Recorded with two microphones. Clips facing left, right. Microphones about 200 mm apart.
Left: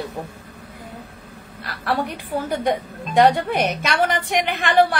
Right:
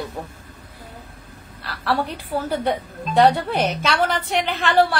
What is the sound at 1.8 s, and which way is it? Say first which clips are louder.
A woman's voice: even; 15° left (ahead or behind).